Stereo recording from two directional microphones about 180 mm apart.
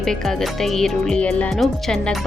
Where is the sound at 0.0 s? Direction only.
Centre (ahead or behind).